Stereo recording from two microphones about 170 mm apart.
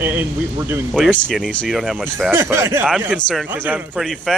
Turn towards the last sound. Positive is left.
turn(degrees=0)  # may be behind; listen again after turning